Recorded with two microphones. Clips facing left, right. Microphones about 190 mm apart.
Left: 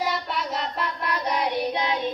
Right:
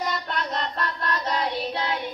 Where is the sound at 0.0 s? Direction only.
5° left (ahead or behind).